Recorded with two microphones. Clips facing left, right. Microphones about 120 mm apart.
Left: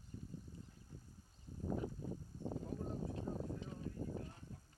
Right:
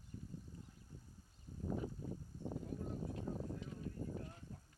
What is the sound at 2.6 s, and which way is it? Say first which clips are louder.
Clip-clop: left 1 dB; 35° left (ahead or behind).